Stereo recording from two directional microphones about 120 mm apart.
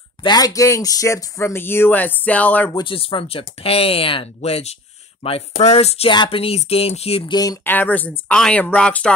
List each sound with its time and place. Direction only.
0.2 s speech: 35° left (ahead or behind); by 2.7 s 10° left (ahead or behind)
2.7 s speech: 45° left (ahead or behind); by 6.0 s 60° left (ahead or behind)
6.0 s speech: 45° left (ahead or behind)
7.2 s speech: 35° left (ahead or behind)
7.6 s speech: 15° left (ahead or behind)